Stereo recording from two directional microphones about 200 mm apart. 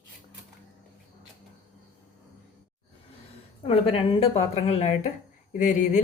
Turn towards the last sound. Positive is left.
turn(degrees=35)  # may be behind; listen again after turning